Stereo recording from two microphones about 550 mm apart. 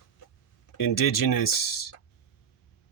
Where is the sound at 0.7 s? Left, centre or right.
Left.